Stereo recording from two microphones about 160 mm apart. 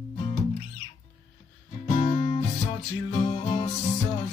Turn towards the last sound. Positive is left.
turn(degrees=35)  # may be behind; listen again after turning